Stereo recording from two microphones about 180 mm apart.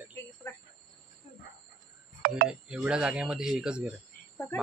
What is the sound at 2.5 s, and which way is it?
Speech, 5° right (ahead or behind).